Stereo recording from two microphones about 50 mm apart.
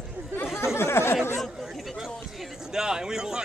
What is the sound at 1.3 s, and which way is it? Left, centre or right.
Speech, centre.